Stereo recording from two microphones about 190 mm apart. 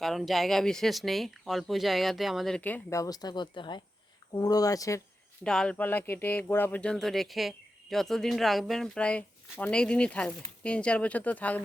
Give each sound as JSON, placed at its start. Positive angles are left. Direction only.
{"t": 0.0, "sound": "speech", "side_deg": 0}
{"t": 5.4, "sound": "speech", "side_deg": 5}